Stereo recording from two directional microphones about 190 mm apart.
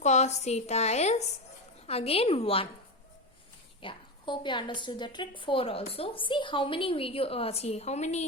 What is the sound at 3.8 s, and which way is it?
A woman's voice, 25° left (ahead or behind).